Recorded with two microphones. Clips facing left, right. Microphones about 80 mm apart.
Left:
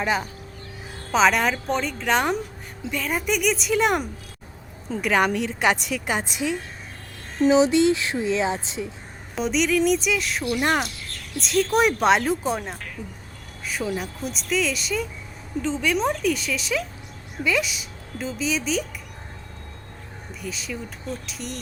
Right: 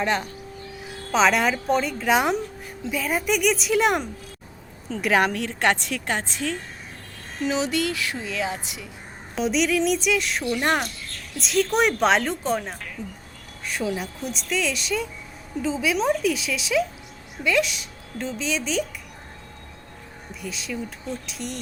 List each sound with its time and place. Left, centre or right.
0.0 s a woman's voice: centre
7.4 s a woman's voice: left
9.3 s a woman's voice: centre
20.4 s a woman's voice: centre